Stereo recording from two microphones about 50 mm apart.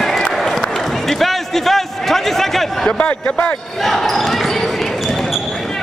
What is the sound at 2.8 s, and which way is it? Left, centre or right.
Speech, left.